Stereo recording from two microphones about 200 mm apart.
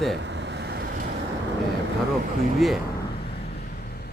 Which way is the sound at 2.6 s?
Centre (ahead or behind).